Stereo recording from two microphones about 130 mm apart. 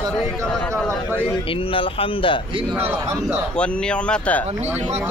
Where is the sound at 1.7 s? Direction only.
45° left (ahead or behind).